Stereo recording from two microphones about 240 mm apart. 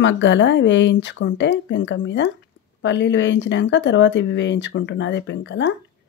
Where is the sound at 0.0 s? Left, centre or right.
Left.